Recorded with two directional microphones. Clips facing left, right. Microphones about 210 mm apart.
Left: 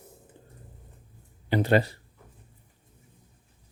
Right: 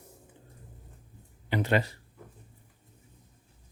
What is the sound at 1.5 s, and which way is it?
Speech, 35° left (ahead or behind).